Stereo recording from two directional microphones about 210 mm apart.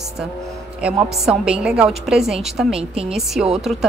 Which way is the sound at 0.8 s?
5° right (ahead or behind).